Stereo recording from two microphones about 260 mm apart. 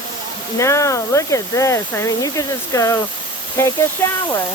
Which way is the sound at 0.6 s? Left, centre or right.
Centre.